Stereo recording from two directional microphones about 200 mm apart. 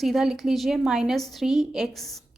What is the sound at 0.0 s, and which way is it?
A woman's voice, centre (ahead or behind).